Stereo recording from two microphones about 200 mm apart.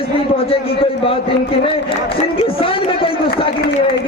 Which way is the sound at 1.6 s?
25° left (ahead or behind).